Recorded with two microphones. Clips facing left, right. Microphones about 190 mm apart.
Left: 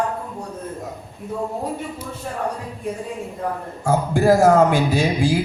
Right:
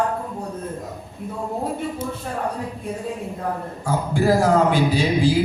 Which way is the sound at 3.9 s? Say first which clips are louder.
Left 3 dB; 45° left (ahead or behind).